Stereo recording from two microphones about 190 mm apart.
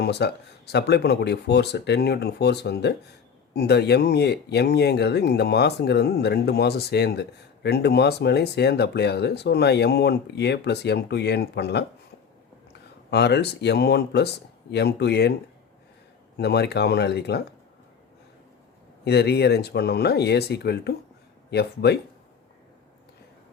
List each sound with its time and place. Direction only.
0.0 s speech: 60° left (ahead or behind)
13.1 s speech: 60° left (ahead or behind)
16.4 s speech: 60° left (ahead or behind)
19.0 s speech: 60° left (ahead or behind)